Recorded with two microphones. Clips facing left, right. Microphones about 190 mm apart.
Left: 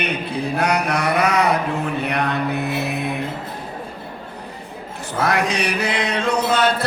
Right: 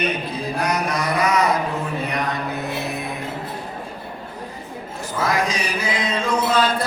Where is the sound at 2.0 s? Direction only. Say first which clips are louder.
Left 3 dB; 65° left (ahead or behind).